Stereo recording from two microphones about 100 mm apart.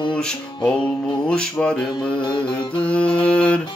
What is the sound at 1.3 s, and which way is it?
Music, 10° left (ahead or behind).